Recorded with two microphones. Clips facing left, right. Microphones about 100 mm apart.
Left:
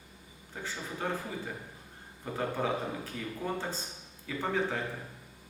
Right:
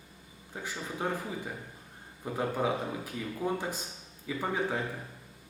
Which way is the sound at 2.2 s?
10° right (ahead or behind).